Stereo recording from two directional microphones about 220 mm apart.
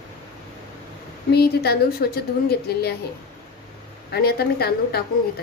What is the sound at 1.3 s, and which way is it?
A woman's voice, 45° left (ahead or behind).